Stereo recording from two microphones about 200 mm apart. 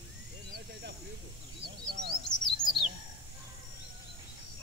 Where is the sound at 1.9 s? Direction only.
50° right (ahead or behind).